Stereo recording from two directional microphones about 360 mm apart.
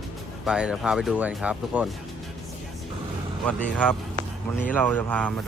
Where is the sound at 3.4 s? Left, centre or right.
Centre.